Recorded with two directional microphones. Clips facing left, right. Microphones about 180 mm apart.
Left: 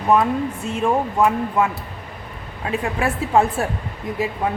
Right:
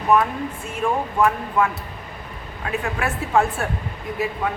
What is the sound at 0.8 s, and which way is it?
Speech, 25° left (ahead or behind).